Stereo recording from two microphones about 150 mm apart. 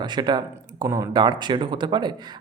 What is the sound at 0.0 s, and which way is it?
Speech, 30° right (ahead or behind).